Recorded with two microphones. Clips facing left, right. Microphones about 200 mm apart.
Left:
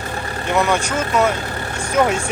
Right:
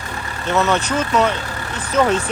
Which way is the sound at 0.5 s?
10° left (ahead or behind).